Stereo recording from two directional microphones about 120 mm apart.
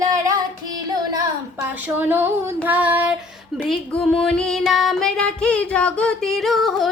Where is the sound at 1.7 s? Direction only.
15° right (ahead or behind).